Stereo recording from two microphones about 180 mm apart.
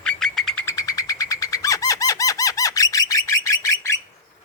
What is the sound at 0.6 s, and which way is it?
Bird, 20° left (ahead or behind).